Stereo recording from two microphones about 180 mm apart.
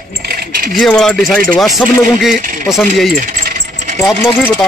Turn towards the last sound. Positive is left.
turn(degrees=0)  # may be behind; listen again after turning